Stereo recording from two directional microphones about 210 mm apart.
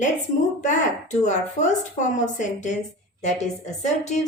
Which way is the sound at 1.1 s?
35° left (ahead or behind).